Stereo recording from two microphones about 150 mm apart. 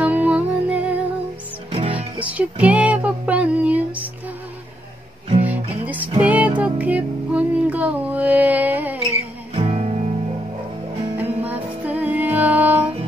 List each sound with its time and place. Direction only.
0.0 s music: 10° right (ahead or behind)
1.7 s music: 40° right (ahead or behind)
2.0 s music: 10° right (ahead or behind)
5.9 s music: 10° right (ahead or behind)
9.6 s music: 45° right (ahead or behind)
11.4 s music: 10° right (ahead or behind)